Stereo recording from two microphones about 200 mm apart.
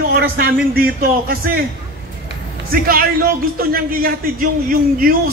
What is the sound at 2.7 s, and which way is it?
A man's voice, 45° right (ahead or behind).